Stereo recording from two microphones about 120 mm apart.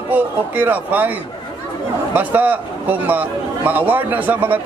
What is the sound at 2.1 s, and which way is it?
A man's voice, 15° right (ahead or behind).